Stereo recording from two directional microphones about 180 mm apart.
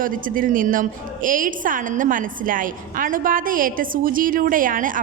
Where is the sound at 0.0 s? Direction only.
50° right (ahead or behind).